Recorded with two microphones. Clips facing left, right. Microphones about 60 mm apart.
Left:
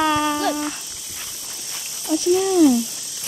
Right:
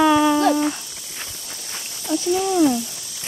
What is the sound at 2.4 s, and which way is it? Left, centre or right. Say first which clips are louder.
Speech: left 2 dB; right.